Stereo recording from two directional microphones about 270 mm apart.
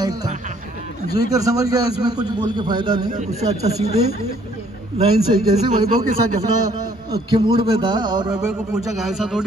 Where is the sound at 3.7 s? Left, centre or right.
Left.